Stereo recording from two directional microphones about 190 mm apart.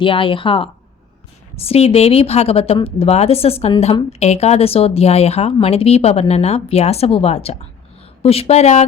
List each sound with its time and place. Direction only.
0.0 s speech: 25° left (ahead or behind)